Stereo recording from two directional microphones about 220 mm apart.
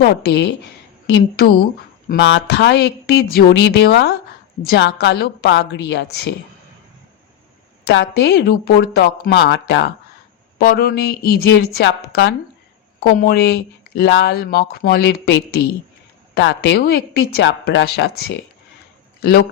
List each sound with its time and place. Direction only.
0.0 s speech: 50° left (ahead or behind)
7.9 s speech: 50° left (ahead or behind)
10.6 s speech: 40° left (ahead or behind)